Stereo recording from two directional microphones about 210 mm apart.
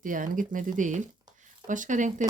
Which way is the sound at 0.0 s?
40° right (ahead or behind).